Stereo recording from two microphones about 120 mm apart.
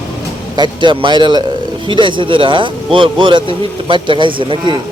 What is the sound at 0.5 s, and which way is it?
A man's voice, 40° right (ahead or behind).